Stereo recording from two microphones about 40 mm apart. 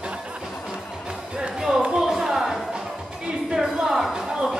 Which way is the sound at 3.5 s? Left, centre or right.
Centre.